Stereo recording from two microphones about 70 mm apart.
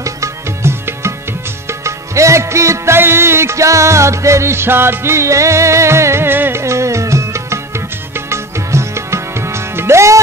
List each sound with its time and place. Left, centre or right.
0.0 s music: right
6.6 s music: right